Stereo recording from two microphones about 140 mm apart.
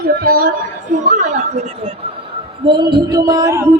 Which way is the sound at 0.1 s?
90° right.